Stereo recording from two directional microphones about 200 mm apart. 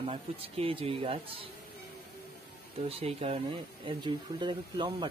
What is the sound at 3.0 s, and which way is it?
Speech, 30° right (ahead or behind).